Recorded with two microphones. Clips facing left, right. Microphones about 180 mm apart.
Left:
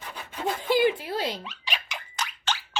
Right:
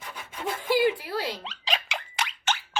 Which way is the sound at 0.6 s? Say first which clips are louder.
Even; 20° left (ahead or behind).